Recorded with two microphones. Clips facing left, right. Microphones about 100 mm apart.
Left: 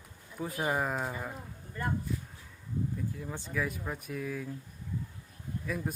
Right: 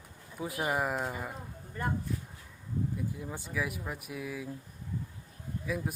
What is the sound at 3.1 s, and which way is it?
Speech, 10° right (ahead or behind).